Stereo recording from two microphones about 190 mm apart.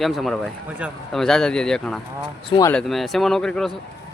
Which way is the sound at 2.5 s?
20° left (ahead or behind).